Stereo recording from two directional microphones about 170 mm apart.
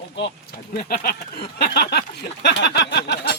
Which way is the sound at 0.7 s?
60° left (ahead or behind).